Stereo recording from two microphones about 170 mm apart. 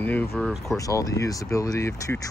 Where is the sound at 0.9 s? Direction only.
20° left (ahead or behind).